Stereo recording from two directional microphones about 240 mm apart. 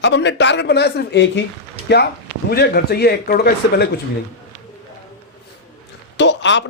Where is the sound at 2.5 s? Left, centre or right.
Left.